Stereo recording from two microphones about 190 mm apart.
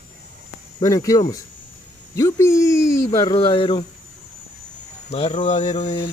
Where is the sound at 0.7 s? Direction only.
20° left (ahead or behind).